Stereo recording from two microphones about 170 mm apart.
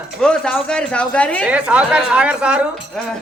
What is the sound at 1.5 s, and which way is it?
A woman's voice, 5° right (ahead or behind).